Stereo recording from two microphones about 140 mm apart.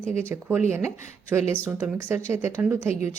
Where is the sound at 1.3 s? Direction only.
15° right (ahead or behind).